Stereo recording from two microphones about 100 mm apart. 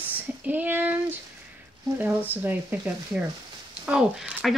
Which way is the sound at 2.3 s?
15° right (ahead or behind).